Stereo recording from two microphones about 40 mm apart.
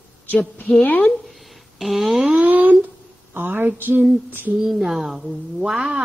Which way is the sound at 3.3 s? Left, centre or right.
Right.